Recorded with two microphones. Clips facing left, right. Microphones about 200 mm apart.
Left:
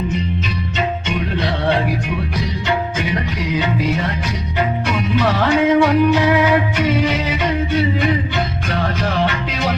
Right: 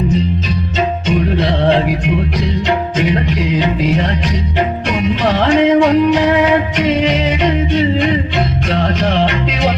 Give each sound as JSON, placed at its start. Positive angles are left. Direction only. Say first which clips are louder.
{"t": 5.3, "sound": "music", "louder": "right 5 dB", "side_deg": -30}